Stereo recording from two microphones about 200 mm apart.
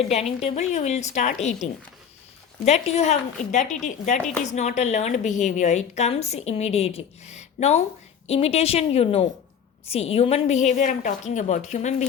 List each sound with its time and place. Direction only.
0.0 s a woman's voice: 30° left (ahead or behind)
2.6 s a woman's voice: 35° left (ahead or behind)